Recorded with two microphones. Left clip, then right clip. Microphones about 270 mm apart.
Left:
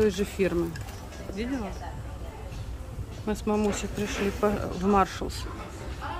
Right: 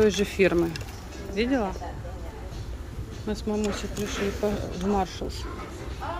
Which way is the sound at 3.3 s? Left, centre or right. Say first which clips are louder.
Left 2 dB; centre.